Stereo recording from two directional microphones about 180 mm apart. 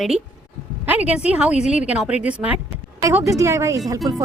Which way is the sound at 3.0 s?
15° right (ahead or behind).